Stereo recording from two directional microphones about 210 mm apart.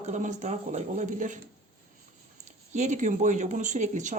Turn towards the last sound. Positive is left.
turn(degrees=-35)  # may be behind; listen again after turning